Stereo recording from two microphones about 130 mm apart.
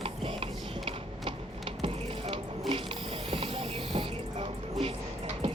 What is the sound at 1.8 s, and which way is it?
Ratchet, 50° right (ahead or behind).